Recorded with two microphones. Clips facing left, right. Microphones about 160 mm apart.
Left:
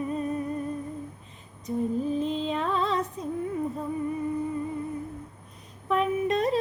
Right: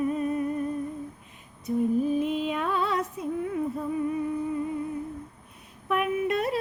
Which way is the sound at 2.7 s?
10° right (ahead or behind).